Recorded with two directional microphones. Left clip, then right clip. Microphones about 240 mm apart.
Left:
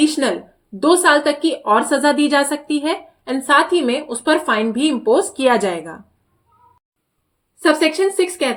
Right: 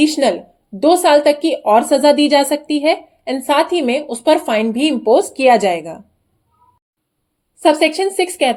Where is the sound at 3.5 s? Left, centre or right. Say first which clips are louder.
Even; centre.